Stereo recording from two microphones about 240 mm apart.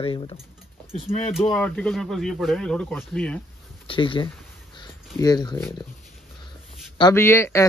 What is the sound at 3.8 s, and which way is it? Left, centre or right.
Speech, left.